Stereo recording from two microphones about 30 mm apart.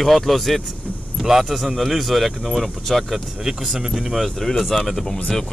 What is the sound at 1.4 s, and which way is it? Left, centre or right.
Speech, centre.